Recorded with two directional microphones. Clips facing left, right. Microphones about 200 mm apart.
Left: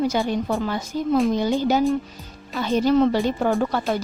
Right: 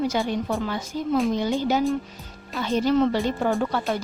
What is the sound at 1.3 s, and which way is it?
Speech, 40° left (ahead or behind).